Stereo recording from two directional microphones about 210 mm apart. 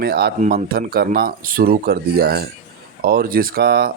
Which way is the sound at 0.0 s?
45° right (ahead or behind).